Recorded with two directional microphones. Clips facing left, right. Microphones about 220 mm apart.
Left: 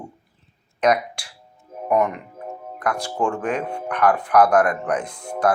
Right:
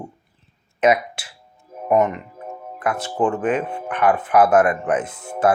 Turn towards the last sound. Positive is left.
turn(degrees=-5)  # may be behind; listen again after turning